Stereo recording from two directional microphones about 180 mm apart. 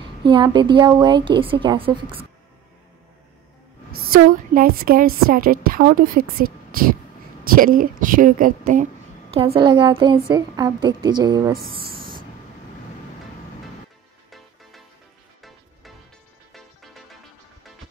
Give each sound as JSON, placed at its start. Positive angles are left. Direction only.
{"t": 0.0, "sound": "a woman's voice", "side_deg": -25}
{"t": 3.9, "sound": "a woman's voice", "side_deg": -55}
{"t": 9.3, "sound": "a woman's voice", "side_deg": -30}
{"t": 16.5, "sound": "music", "side_deg": 0}